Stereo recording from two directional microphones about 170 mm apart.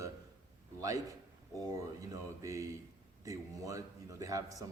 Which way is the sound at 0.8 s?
20° right (ahead or behind).